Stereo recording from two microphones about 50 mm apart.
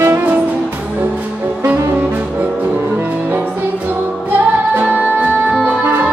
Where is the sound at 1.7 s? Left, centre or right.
Right.